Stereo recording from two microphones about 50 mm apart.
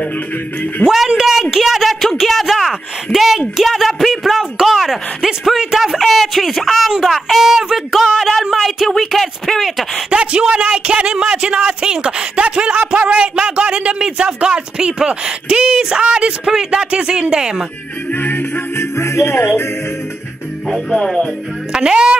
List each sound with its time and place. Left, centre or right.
0.8 s a man's voice: centre
8.6 s a sound: centre
10.0 s a sound: right
10.5 s speech: right
18.1 s music: left
18.8 s music: left
20.6 s music: centre
21.7 s speech: centre